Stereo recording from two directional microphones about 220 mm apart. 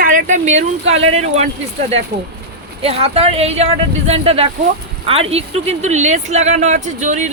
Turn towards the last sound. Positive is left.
turn(degrees=-30)  # may be behind; listen again after turning